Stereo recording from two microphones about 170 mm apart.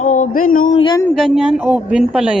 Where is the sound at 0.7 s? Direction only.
30° left (ahead or behind).